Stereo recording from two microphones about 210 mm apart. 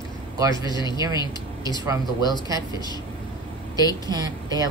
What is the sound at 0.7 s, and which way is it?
Speech, 20° left (ahead or behind).